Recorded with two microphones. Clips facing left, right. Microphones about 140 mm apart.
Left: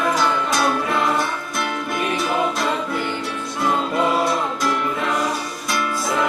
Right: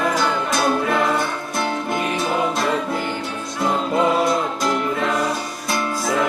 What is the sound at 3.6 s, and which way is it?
Music, 25° right (ahead or behind).